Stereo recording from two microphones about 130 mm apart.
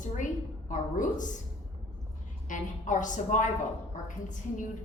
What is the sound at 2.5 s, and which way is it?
A woman's voice, 80° left.